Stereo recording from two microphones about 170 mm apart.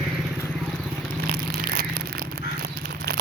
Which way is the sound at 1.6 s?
60° right (ahead or behind).